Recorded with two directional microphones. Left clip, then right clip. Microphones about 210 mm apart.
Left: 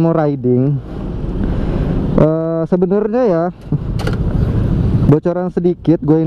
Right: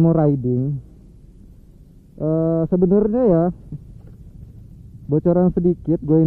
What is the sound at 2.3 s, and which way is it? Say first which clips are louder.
Speech: left 3 dB; 10° left (ahead or behind).